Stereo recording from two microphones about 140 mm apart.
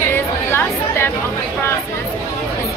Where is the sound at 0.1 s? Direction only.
15° left (ahead or behind).